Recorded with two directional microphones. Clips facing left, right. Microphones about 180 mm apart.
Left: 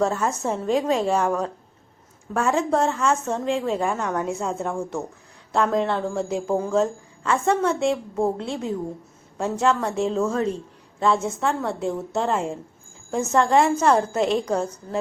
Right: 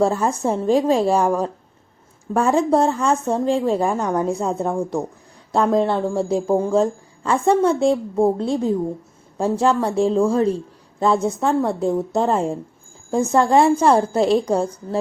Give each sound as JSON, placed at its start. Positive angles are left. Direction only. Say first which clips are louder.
{"t": 0.0, "sound": "a woman's voice", "louder": "right 4 dB", "side_deg": -30}